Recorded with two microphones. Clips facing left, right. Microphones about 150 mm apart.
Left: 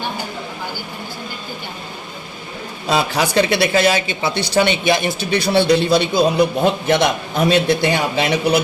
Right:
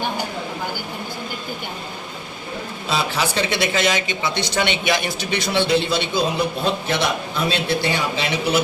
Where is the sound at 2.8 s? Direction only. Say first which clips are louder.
Left 5 dB; 45° left (ahead or behind).